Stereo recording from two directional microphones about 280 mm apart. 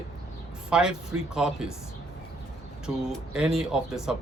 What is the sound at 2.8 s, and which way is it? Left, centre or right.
Speech, centre.